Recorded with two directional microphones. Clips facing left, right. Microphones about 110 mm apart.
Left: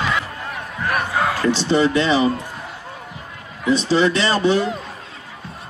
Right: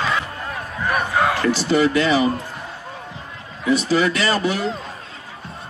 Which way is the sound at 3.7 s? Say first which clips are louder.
Left 1 dB; 25° left (ahead or behind).